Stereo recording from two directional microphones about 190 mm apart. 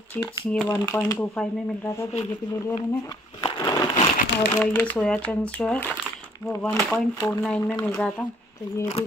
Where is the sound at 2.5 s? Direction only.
15° left (ahead or behind).